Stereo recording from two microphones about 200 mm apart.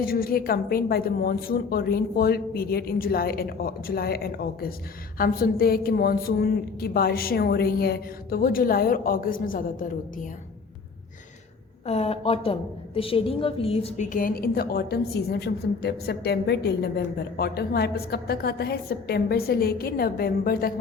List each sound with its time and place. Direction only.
0.0 s a woman's voice: 45° left (ahead or behind)
11.9 s a woman's voice: 30° left (ahead or behind); by 20.7 s 50° left (ahead or behind)